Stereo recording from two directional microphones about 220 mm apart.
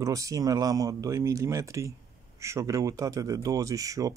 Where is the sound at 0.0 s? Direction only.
15° right (ahead or behind).